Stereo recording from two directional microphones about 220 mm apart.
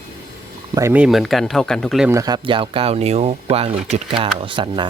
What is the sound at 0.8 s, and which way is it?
Speech, 10° right (ahead or behind).